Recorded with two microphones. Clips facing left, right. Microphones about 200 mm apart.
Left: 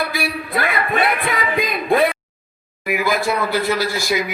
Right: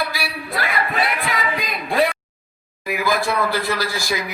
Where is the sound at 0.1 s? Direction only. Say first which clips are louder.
Left 5 dB; 55° left (ahead or behind).